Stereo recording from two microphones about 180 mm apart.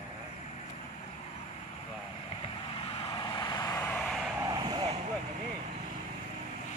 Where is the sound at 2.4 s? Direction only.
30° left (ahead or behind); by 4.3 s 5° left (ahead or behind).